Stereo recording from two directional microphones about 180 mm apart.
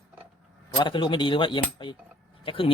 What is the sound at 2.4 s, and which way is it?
Speech, 30° left (ahead or behind).